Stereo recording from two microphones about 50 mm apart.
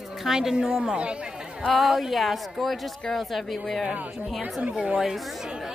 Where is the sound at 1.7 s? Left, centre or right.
Centre.